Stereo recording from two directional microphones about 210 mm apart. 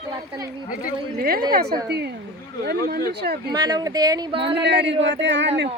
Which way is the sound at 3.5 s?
20° right (ahead or behind).